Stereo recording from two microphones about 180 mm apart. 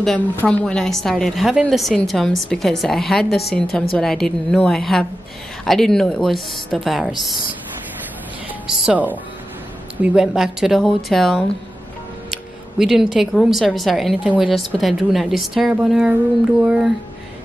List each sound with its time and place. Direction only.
0.0 s speech: 5° left (ahead or behind)
3.3 s a woman's voice: 60° left (ahead or behind)
3.9 s speech: 5° left (ahead or behind)
8.6 s speech: 5° right (ahead or behind)